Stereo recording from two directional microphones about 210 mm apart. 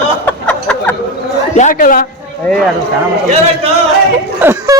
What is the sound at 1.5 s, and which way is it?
Speech, 40° left (ahead or behind).